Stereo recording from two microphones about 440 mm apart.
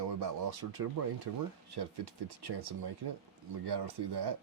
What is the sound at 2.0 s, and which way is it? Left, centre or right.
Speech, right.